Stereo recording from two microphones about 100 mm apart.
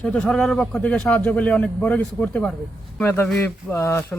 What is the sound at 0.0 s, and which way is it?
A man's voice, 10° left (ahead or behind).